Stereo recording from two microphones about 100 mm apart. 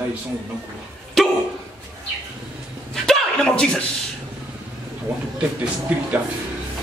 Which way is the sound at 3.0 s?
5° left (ahead or behind).